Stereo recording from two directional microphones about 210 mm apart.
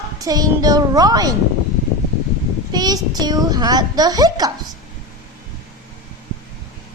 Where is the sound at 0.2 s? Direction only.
15° right (ahead or behind).